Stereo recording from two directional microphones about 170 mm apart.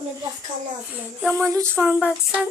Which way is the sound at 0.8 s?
10° right (ahead or behind).